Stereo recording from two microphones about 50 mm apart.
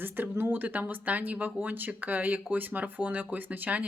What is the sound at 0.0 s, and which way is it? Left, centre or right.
Speech, right.